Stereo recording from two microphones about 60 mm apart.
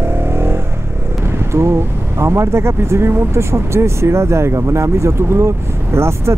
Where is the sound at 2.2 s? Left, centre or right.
Right.